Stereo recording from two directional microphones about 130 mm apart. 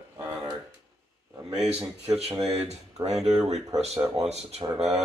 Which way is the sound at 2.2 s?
50° right (ahead or behind).